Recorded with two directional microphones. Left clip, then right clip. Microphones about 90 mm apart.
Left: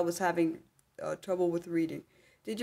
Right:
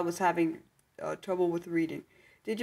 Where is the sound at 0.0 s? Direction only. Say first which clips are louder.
Right 1 dB; 20° left (ahead or behind).